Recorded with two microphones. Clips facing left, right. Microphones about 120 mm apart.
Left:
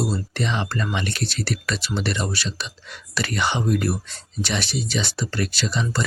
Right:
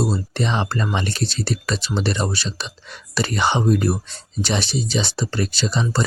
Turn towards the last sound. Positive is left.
turn(degrees=-30)  # may be behind; listen again after turning